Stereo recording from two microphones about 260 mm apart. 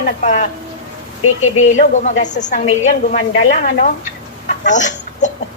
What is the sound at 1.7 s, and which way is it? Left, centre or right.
A woman's voice, left.